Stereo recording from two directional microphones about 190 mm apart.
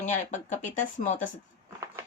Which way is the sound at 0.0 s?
40° left (ahead or behind).